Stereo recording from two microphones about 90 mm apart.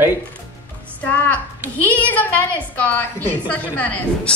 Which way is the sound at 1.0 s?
15° left (ahead or behind).